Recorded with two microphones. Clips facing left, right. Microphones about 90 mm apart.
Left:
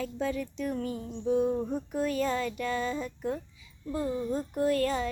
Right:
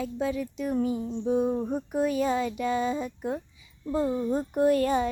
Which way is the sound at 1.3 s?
20° right (ahead or behind).